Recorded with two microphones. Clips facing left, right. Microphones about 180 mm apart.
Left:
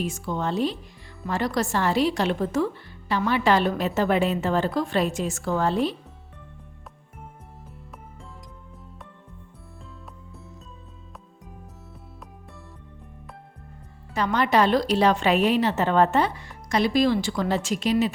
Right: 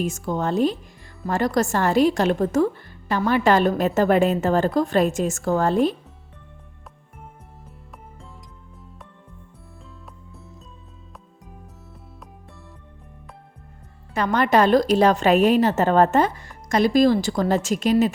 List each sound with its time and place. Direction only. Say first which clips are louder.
0.0 s a woman's voice: right 3 dB; 45° right (ahead or behind)
14.1 s a woman's voice: right 3 dB; 50° right (ahead or behind)